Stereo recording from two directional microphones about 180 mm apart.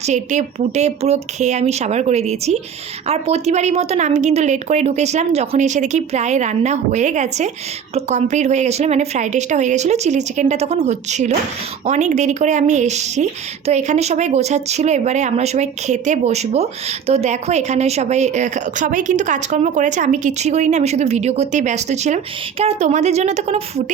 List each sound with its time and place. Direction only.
0.0 s speech: 40° right (ahead or behind)